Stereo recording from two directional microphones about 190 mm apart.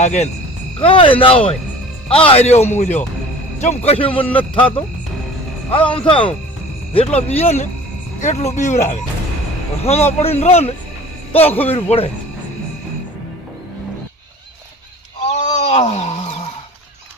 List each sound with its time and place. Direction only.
0.0 s a man's voice: 35° left (ahead or behind)
5.8 s speech: 5° left (ahead or behind)
6.1 s a man's voice: 25° left (ahead or behind)
15.3 s a sound: 35° left (ahead or behind)